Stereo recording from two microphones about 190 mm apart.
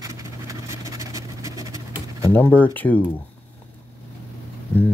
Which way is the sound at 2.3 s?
10° left (ahead or behind).